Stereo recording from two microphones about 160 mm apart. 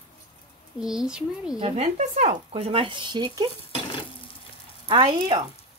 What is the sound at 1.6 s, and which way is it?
Speech, 40° right (ahead or behind).